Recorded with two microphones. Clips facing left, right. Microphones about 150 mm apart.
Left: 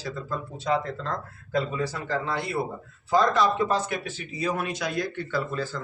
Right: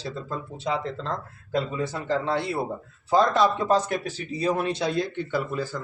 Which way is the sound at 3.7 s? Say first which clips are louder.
Right 4 dB; 40° right (ahead or behind).